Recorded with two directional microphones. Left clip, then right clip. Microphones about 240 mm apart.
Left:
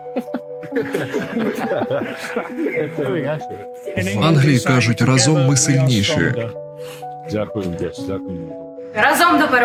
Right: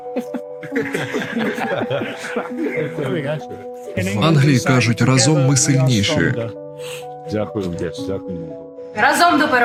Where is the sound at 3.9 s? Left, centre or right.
Centre.